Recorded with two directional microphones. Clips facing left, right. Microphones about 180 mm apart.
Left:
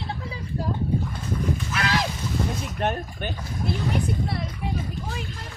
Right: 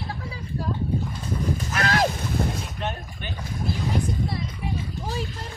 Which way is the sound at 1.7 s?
45° right (ahead or behind).